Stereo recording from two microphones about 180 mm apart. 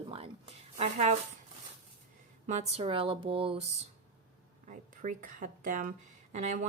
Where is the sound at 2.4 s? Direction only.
40° right (ahead or behind).